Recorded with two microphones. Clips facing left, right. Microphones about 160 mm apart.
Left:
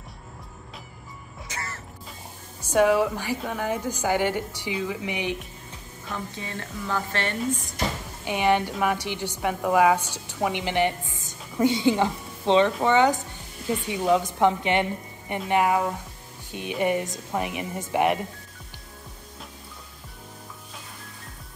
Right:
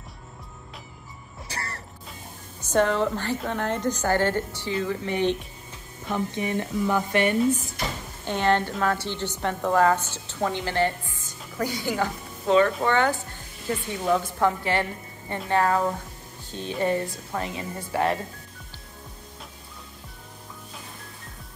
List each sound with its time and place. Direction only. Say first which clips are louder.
1.5 s music: right 1 dB; 35° right (ahead or behind)
2.6 s a woman's voice: left 2 dB; 10° left (ahead or behind)
6.1 s speech: right 8 dB; 20° right (ahead or behind)
8.3 s a woman's voice: even; 15° left (ahead or behind)